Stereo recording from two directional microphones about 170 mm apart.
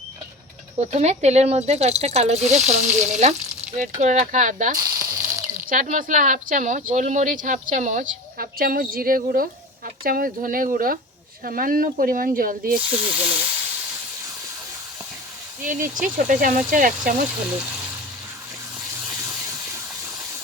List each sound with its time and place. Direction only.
0.8 s speech: 40° right (ahead or behind)
4.8 s a sound: 20° right (ahead or behind)
5.6 s speech: 50° right (ahead or behind)
12.7 s speech: 10° right (ahead or behind)
15.6 s speech: 50° right (ahead or behind)